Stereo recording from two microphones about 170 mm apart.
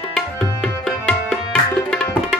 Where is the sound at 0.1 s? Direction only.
Centre (ahead or behind).